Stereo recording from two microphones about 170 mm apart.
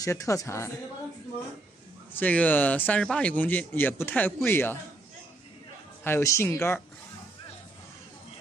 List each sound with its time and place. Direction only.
0.0 s speech: 20° left (ahead or behind)
2.1 s speech: 10° left (ahead or behind)
6.0 s speech: 15° left (ahead or behind)